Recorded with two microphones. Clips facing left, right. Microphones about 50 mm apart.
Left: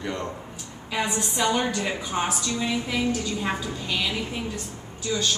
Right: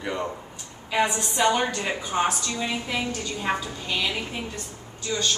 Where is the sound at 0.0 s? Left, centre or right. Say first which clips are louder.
Right 1 dB; centre.